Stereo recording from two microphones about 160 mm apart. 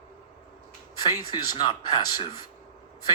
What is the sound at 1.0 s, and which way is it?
Speech, 30° left (ahead or behind).